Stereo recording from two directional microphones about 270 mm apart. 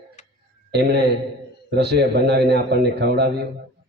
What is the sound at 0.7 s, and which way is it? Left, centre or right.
A man's voice, right.